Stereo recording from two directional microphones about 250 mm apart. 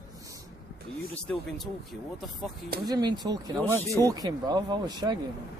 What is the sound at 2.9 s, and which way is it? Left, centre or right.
Speech, centre.